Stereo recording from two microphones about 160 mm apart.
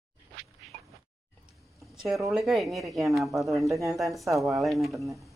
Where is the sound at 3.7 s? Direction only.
20° right (ahead or behind).